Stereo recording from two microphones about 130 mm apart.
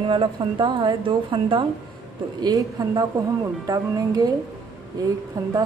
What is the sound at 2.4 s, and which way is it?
Speech, 30° right (ahead or behind).